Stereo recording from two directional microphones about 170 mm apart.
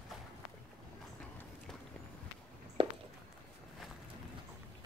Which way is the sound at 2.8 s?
35° right (ahead or behind).